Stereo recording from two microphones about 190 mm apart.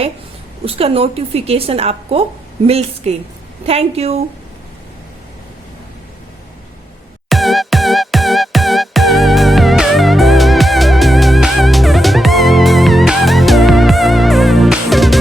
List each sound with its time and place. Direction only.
0.6 s a woman's voice: 30° right (ahead or behind)
7.3 s music: centre (ahead or behind)